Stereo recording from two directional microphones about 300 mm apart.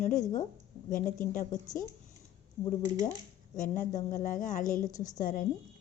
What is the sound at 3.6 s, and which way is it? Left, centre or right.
A woman's voice, left.